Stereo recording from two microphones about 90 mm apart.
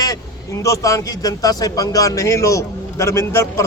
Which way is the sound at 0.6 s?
35° left (ahead or behind).